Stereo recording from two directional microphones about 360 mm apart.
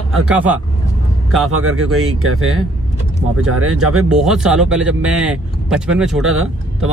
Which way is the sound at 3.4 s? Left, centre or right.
Right.